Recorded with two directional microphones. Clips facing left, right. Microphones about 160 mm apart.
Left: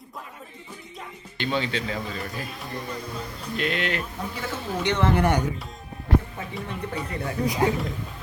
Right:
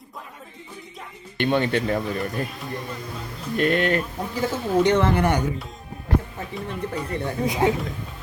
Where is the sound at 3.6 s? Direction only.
50° right (ahead or behind).